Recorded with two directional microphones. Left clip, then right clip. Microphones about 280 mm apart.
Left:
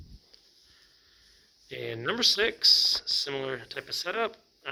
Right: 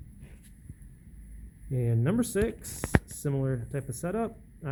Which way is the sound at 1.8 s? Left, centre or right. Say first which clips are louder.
Left 4 dB; centre.